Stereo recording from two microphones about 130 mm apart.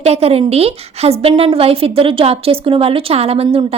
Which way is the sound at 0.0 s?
55° right (ahead or behind).